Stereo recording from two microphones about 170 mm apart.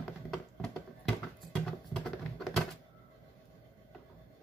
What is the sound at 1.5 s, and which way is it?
Music, centre (ahead or behind).